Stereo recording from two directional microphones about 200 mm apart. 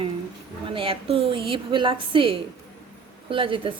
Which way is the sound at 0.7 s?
25° right (ahead or behind).